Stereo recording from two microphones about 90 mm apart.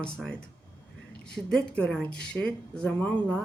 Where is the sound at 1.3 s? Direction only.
10° left (ahead or behind).